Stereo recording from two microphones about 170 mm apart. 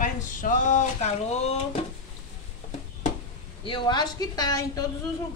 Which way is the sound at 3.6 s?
30° left (ahead or behind).